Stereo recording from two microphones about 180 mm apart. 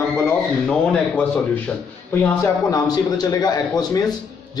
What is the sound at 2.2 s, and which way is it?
A man's voice, 20° left (ahead or behind).